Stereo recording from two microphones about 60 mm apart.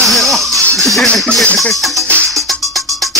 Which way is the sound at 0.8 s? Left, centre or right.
Centre.